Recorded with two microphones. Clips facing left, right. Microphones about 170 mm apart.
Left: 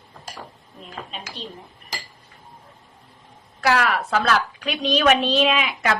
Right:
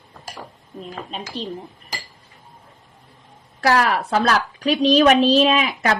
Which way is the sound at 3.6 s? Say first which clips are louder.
Right 2 dB; 35° right (ahead or behind).